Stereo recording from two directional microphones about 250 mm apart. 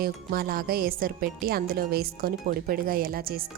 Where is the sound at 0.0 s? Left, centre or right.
Right.